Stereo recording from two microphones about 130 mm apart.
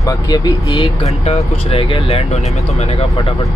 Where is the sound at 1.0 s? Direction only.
55° left (ahead or behind).